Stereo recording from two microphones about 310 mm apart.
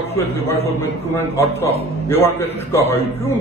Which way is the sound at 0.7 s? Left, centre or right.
Centre.